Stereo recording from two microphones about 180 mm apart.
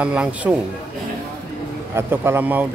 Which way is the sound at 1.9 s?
15° right (ahead or behind).